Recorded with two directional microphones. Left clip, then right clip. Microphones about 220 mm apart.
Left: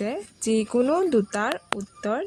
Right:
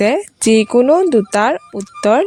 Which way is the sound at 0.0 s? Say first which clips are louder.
Right 15 dB; 40° right (ahead or behind).